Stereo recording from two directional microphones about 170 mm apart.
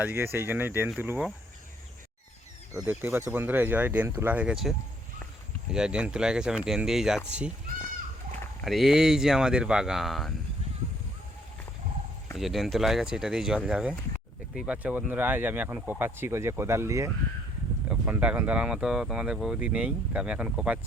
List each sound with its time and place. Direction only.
0.0 s speech: 10° right (ahead or behind)
2.8 s speech: 10° right (ahead or behind)
5.7 s speech: 5° right (ahead or behind)
8.6 s speech: centre (ahead or behind)
12.4 s speech: centre (ahead or behind)